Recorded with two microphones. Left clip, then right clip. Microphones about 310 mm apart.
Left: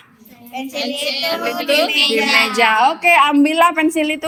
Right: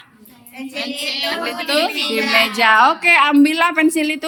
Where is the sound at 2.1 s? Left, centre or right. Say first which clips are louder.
Left 2 dB; centre.